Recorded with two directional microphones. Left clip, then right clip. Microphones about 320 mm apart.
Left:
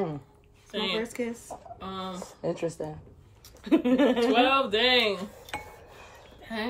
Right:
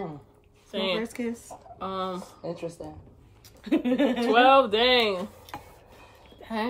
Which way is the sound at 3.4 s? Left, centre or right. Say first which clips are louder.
Left 2 dB; centre.